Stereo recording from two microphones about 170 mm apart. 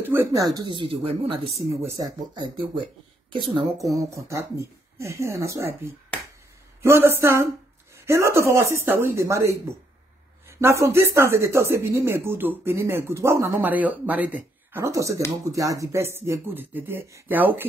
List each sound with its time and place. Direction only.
0.0 s speech: 10° right (ahead or behind); by 1.4 s 30° right (ahead or behind)
1.8 s speech: 15° right (ahead or behind)
2.3 s speech: 25° right (ahead or behind)
10.6 s speech: 15° right (ahead or behind)